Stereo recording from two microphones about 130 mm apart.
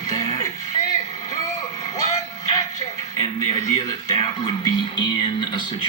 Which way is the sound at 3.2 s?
30° left (ahead or behind).